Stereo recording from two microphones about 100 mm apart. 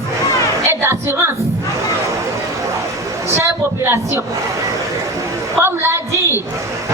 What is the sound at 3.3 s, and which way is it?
Speech, 25° right (ahead or behind).